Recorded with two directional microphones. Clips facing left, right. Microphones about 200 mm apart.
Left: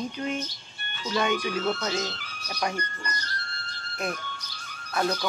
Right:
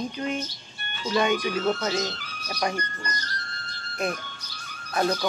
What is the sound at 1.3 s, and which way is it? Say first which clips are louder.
Speech: right 2 dB; 40° right (ahead or behind).